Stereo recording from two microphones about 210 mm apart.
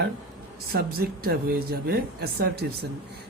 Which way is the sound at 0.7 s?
45° right (ahead or behind).